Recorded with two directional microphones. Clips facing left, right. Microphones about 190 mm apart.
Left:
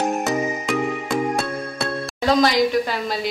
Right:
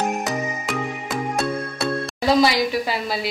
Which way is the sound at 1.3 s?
5° right (ahead or behind).